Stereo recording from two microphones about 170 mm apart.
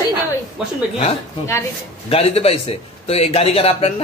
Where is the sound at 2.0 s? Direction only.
35° left (ahead or behind).